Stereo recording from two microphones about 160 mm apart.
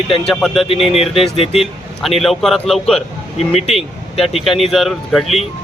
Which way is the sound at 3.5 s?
40° left (ahead or behind).